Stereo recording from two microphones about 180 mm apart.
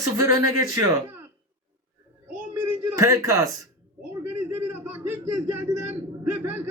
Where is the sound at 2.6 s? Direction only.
15° right (ahead or behind).